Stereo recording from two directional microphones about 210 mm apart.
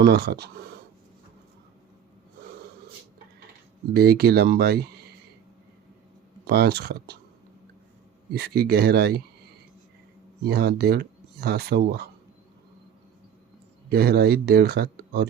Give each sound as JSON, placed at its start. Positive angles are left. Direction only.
{"t": 0.0, "sound": "speech", "side_deg": -50}
{"t": 3.9, "sound": "speech", "side_deg": -45}
{"t": 6.4, "sound": "speech", "side_deg": -50}
{"t": 8.3, "sound": "speech", "side_deg": -50}
{"t": 10.4, "sound": "speech", "side_deg": -50}
{"t": 13.9, "sound": "speech", "side_deg": -45}